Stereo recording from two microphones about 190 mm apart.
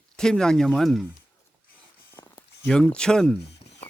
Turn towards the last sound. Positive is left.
turn(degrees=5)  # may be behind; listen again after turning